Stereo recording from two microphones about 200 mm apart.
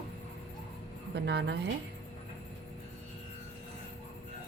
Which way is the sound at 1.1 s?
60° right (ahead or behind).